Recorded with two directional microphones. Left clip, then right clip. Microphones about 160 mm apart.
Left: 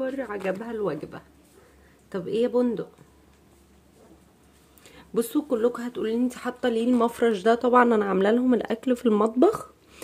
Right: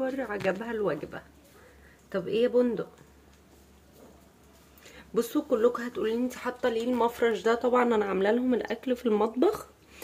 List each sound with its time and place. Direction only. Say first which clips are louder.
0.0 s speech: left 1 dB; centre (ahead or behind); by 2.9 s 20° left (ahead or behind)
4.8 s speech: left 2 dB; 20° left (ahead or behind)